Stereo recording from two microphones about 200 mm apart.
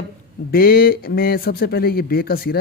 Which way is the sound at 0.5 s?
50° left (ahead or behind).